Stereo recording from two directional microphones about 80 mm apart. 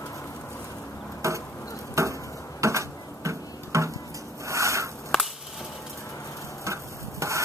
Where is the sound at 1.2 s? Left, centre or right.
Right.